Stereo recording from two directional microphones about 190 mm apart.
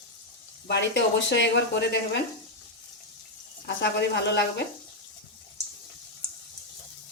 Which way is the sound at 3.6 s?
60° left (ahead or behind).